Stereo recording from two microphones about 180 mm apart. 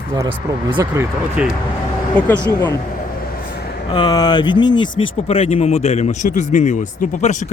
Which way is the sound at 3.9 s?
25° left (ahead or behind).